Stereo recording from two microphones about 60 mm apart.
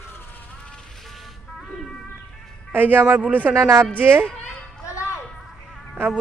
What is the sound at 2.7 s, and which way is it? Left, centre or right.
Speech, right.